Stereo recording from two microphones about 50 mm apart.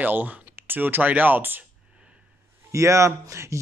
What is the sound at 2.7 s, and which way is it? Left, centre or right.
Speech, right.